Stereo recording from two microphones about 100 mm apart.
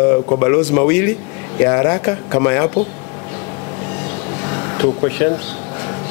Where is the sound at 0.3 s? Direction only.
20° left (ahead or behind).